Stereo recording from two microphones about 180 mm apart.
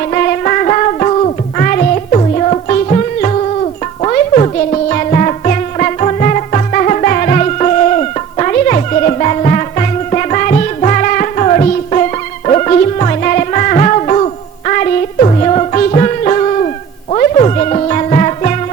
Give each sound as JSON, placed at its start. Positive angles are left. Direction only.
{"t": 0.1, "sound": "music", "side_deg": 45}
{"t": 1.6, "sound": "music", "side_deg": 50}
{"t": 2.1, "sound": "music", "side_deg": 35}